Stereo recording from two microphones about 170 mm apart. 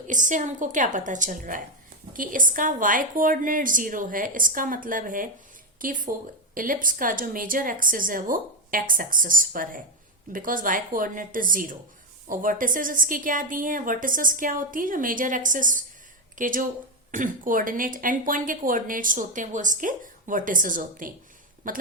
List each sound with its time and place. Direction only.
0.1 s a woman's voice: 50° right (ahead or behind)